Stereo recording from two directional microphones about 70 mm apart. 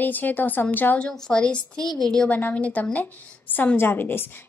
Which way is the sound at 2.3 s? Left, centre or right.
Left.